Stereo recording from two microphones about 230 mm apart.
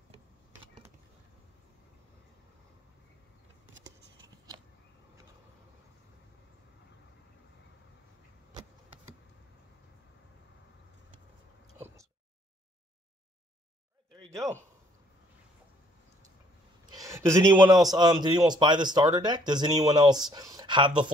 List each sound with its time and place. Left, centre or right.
17.0 s a man's voice: centre